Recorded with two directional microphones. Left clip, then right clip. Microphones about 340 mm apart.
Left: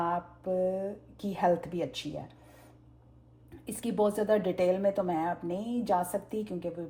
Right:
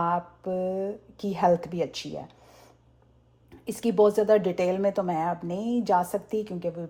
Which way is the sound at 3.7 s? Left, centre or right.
Right.